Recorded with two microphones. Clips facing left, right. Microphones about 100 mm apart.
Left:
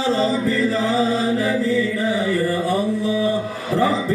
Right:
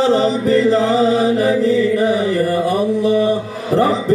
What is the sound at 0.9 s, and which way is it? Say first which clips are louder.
Mantra: right 5 dB; 20° right (ahead or behind).